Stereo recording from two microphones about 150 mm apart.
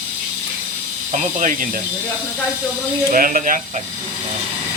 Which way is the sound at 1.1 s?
55° right (ahead or behind).